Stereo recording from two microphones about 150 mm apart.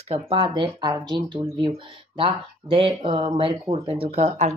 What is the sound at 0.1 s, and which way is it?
Speech, 35° right (ahead or behind).